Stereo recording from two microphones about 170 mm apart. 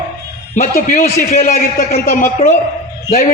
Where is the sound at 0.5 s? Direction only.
50° left (ahead or behind).